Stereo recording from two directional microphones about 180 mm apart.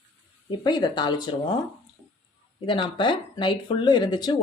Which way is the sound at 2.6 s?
25° left (ahead or behind).